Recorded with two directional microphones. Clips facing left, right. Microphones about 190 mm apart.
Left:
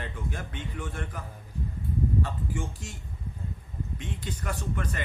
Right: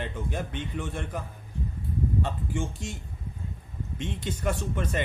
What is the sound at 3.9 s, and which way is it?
Speech, 25° right (ahead or behind).